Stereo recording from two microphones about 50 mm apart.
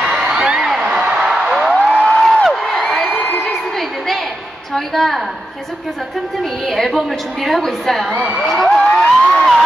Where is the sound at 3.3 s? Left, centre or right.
Centre.